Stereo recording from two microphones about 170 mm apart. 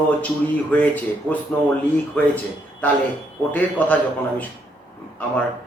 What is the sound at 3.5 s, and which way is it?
Speech, 10° left (ahead or behind).